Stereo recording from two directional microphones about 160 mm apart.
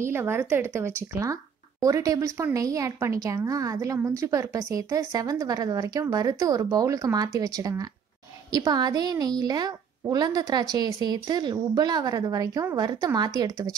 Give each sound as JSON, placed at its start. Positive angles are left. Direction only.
{"t": 0.0, "sound": "speech", "side_deg": -15}